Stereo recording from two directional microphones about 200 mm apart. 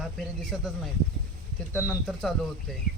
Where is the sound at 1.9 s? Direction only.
Centre (ahead or behind).